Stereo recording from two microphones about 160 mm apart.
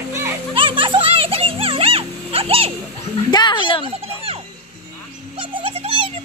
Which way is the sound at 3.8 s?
35° right (ahead or behind).